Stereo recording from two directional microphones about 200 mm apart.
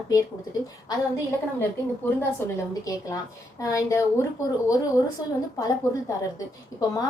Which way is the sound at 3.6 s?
15° left (ahead or behind).